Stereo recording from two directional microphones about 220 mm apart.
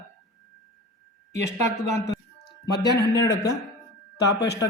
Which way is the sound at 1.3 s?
15° left (ahead or behind).